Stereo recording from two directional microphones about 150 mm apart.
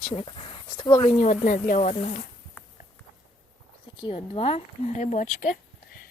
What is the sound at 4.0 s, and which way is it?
Speech, 35° left (ahead or behind).